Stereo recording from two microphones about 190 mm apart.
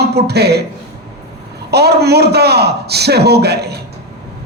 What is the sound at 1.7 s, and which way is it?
Speech, 60° right (ahead or behind).